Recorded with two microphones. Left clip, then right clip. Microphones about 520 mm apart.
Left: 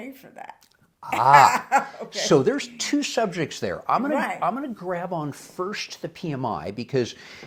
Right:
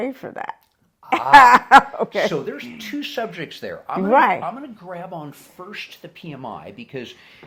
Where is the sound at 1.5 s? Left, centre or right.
Right.